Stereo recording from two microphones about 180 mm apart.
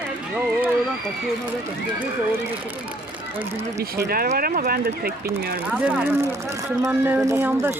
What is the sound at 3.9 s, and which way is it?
Speech, 55° right (ahead or behind).